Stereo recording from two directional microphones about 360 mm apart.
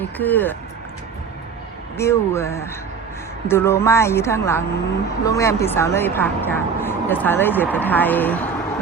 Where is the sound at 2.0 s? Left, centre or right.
Centre.